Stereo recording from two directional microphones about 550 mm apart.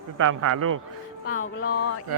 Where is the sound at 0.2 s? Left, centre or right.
Right.